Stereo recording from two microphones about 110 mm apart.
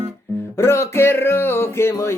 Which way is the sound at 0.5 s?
25° left (ahead or behind).